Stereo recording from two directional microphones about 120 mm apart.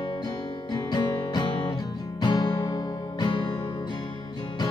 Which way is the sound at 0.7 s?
35° left (ahead or behind).